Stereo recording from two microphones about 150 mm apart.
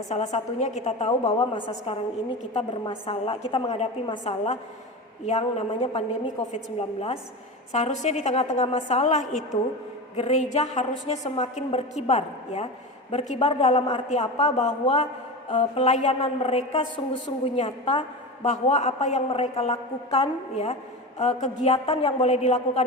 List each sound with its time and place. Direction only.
0.1 s a woman's voice: 50° left (ahead or behind)
1.2 s a woman's voice: 35° left (ahead or behind); by 22.8 s 50° left (ahead or behind)